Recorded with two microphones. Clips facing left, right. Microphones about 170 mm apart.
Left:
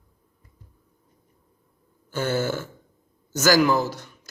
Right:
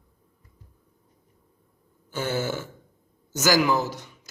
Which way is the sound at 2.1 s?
15° right (ahead or behind).